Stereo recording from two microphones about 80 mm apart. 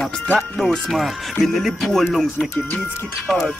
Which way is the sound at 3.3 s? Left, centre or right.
Centre.